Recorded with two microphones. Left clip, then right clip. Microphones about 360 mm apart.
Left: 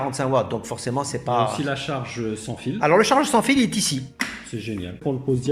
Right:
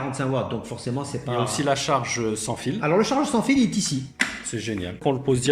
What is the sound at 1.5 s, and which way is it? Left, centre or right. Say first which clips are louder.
Speech: right 4 dB; centre.